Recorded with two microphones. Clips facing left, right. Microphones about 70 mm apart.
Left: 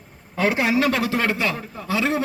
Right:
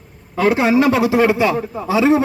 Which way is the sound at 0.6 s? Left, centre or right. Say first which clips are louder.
Right 6 dB; right.